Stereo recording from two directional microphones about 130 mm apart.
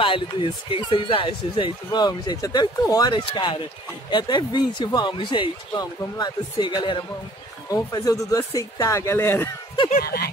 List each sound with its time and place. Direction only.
0.0 s speech: 40° left (ahead or behind)
7.7 s speech: 30° left (ahead or behind)